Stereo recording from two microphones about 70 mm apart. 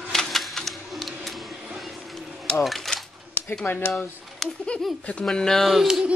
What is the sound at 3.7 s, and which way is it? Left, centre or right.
Speech, left.